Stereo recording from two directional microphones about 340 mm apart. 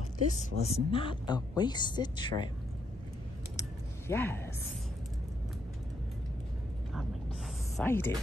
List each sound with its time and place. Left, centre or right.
0.3 s speech: centre
4.1 s speech: centre
7.7 s speech: centre